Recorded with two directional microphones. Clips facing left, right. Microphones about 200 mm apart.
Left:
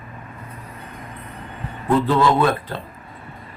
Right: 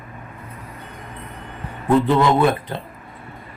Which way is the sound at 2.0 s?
20° right (ahead or behind).